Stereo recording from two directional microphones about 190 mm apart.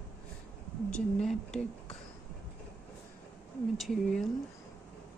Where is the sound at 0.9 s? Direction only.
5° left (ahead or behind).